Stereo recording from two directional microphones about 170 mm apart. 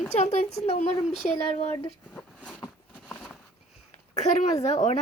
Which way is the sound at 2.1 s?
5° left (ahead or behind).